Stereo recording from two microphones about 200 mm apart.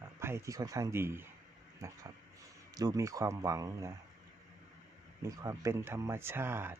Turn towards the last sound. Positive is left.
turn(degrees=-10)  # may be behind; listen again after turning